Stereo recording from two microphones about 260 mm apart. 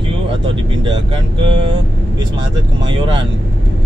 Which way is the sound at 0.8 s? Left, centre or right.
Centre.